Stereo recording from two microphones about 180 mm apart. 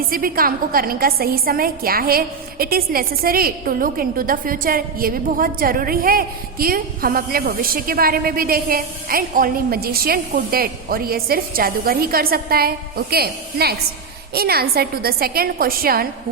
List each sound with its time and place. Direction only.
0.1 s a woman's voice: 50° right (ahead or behind)